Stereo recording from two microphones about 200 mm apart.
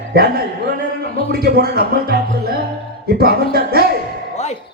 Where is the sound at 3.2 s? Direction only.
50° right (ahead or behind).